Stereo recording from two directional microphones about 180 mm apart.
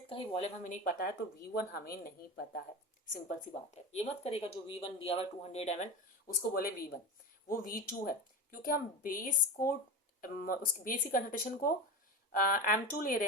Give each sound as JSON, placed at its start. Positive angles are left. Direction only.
{"t": 0.1, "sound": "speech", "side_deg": 30}
{"t": 3.9, "sound": "speech", "side_deg": 35}
{"t": 6.2, "sound": "a woman's voice", "side_deg": 55}